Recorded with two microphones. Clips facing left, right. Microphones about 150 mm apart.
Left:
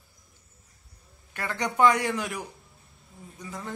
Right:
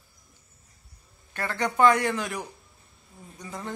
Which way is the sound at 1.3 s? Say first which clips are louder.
Right 2 dB; 15° left (ahead or behind).